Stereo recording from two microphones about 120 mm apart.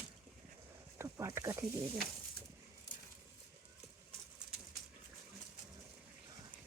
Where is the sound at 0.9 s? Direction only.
25° right (ahead or behind).